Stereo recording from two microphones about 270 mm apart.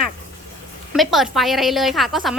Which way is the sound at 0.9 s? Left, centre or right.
Centre.